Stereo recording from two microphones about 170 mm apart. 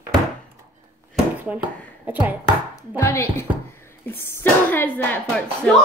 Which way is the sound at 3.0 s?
15° left (ahead or behind).